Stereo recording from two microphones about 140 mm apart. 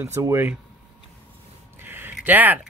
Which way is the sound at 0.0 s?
20° right (ahead or behind).